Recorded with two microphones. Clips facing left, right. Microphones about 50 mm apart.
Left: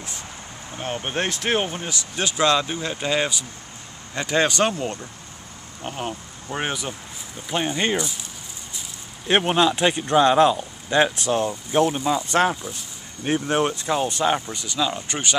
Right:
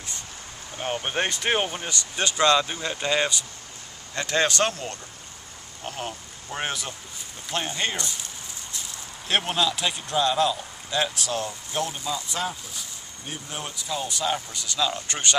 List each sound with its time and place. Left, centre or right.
0.7 s speech: centre
9.3 s speech: left
12.3 s speech: left
14.3 s speech: left
14.8 s speech: centre